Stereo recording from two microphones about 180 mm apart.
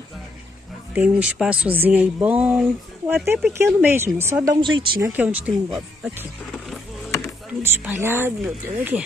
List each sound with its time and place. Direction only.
0.9 s speech: 5° right (ahead or behind)
4.6 s speech: 25° right (ahead or behind)
5.0 s speech: 10° right (ahead or behind)